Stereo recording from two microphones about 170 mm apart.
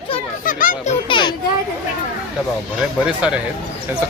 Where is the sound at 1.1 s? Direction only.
25° left (ahead or behind).